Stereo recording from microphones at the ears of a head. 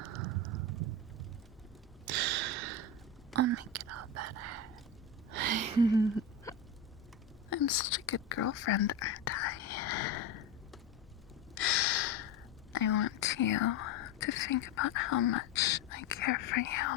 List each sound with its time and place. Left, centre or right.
0.0 s a sound: right
3.3 s whispering: right
5.3 s a sound: right
7.5 s whispering: left
11.5 s gasp: left
12.7 s whispering: left